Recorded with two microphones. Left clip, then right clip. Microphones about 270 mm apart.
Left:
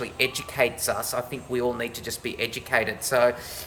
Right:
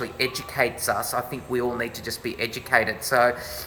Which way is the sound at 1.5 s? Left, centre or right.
Centre.